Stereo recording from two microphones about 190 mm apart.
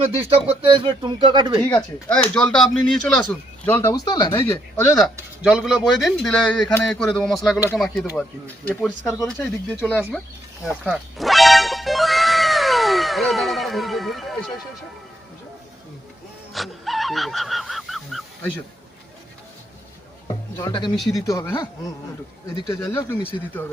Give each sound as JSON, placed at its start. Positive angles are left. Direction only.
{"t": 0.3, "sound": "speech", "side_deg": -30}
{"t": 1.6, "sound": "speech", "side_deg": 5}
{"t": 5.4, "sound": "a man's voice", "side_deg": -5}
{"t": 10.7, "sound": "music", "side_deg": -5}
{"t": 16.6, "sound": "goose", "side_deg": 0}
{"t": 20.2, "sound": "speech", "side_deg": 20}